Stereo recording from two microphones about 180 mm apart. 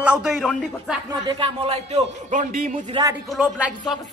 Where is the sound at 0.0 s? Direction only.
5° right (ahead or behind).